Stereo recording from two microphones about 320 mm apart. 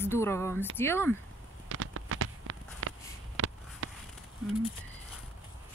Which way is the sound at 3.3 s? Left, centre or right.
Right.